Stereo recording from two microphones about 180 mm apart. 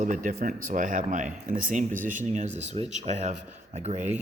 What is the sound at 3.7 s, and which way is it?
Speech, 40° right (ahead or behind).